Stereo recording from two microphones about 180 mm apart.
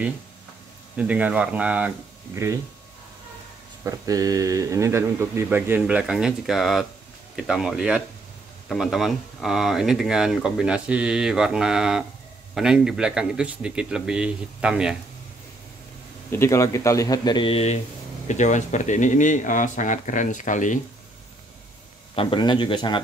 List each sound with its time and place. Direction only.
0.9 s speech: 5° right (ahead or behind)
3.8 s speech: 20° right (ahead or behind)
16.3 s speech: 15° left (ahead or behind); by 20.8 s 45° left (ahead or behind)
22.1 s a man's voice: 30° left (ahead or behind)